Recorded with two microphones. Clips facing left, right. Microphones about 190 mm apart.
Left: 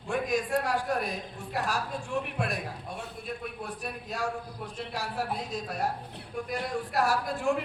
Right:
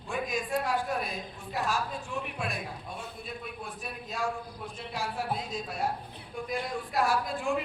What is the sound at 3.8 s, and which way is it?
Speech, 40° left (ahead or behind).